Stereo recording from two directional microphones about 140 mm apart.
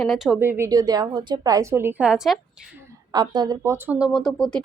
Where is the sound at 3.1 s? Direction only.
30° right (ahead or behind).